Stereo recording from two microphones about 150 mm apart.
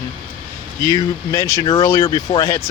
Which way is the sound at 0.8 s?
20° left (ahead or behind).